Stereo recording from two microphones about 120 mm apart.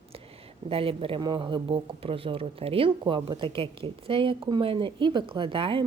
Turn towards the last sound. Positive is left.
turn(degrees=-45)  # may be behind; listen again after turning